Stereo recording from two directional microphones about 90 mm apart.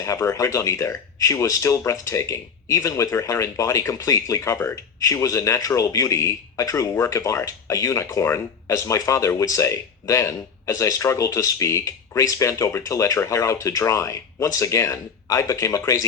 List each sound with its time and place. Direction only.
0.0 s speech: 35° left (ahead or behind)